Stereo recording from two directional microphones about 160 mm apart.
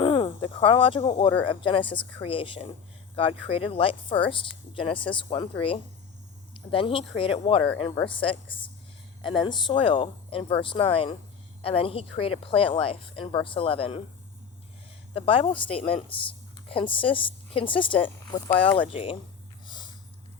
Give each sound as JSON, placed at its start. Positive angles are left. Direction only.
{"t": 0.0, "sound": "speech", "side_deg": 30}
{"t": 15.1, "sound": "speech", "side_deg": 35}
{"t": 18.6, "sound": "speech", "side_deg": 10}
{"t": 18.9, "sound": "speech", "side_deg": 35}
{"t": 19.6, "sound": "snort", "side_deg": 30}